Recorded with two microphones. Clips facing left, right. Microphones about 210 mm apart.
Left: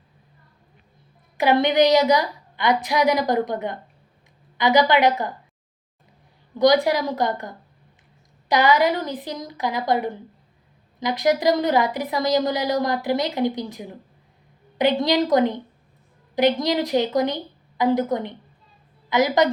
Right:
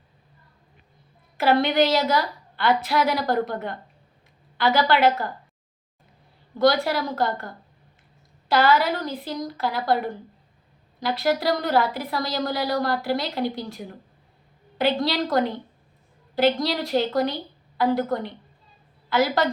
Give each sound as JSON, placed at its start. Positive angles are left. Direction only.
{"t": 1.4, "sound": "speech", "side_deg": 15}
{"t": 6.6, "sound": "speech", "side_deg": 15}